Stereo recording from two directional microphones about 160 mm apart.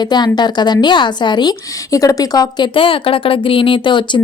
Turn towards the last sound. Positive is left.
turn(degrees=30)  # may be behind; listen again after turning